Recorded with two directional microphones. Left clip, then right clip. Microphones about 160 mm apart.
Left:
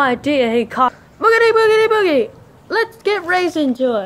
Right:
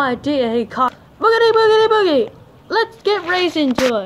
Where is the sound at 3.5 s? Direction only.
5° right (ahead or behind).